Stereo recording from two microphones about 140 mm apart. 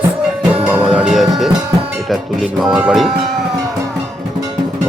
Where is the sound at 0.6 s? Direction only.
10° right (ahead or behind).